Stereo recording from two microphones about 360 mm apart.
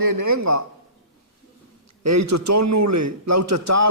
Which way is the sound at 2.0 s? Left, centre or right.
Right.